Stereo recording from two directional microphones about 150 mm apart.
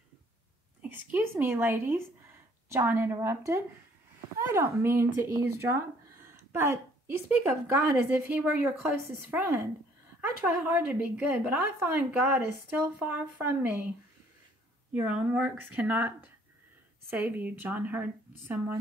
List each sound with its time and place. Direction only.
0.8 s a woman's voice: 10° right (ahead or behind)
17.1 s a woman's voice: 10° right (ahead or behind)